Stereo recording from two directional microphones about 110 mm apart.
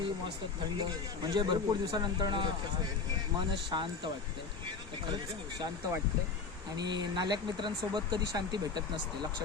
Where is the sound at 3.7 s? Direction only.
45° right (ahead or behind).